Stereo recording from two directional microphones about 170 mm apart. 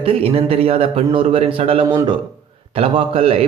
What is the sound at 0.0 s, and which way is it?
Speech, 35° right (ahead or behind).